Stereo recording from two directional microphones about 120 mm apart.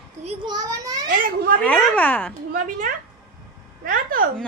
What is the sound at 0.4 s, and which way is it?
Children playing, 35° right (ahead or behind).